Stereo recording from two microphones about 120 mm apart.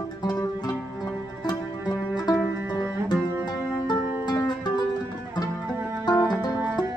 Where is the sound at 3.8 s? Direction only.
35° left (ahead or behind).